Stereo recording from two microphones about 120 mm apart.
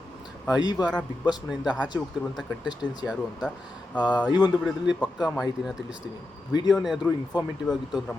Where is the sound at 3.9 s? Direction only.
10° left (ahead or behind).